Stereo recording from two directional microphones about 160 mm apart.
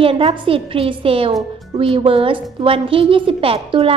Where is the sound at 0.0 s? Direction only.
35° right (ahead or behind).